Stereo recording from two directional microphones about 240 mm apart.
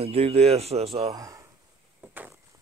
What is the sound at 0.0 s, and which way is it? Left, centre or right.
Speech, right.